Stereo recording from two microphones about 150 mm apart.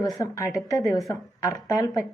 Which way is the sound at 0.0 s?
25° left (ahead or behind).